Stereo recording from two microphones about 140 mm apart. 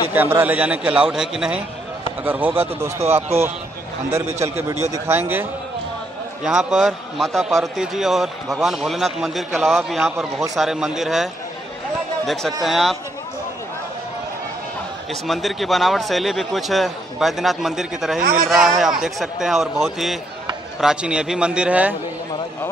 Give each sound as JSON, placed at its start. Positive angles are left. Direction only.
{"t": 0.1, "sound": "a man's voice", "side_deg": -15}
{"t": 4.4, "sound": "a man's voice", "side_deg": -20}
{"t": 6.4, "sound": "a man's voice", "side_deg": -5}
{"t": 12.3, "sound": "a man's voice", "side_deg": 0}
{"t": 15.2, "sound": "a man's voice", "side_deg": 0}
{"t": 18.2, "sound": "a man's voice", "side_deg": -90}
{"t": 18.5, "sound": "a man's voice", "side_deg": 0}